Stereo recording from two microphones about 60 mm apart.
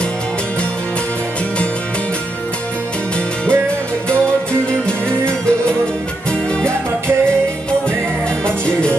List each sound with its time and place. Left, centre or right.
4.8 s music: centre
8.5 s music: centre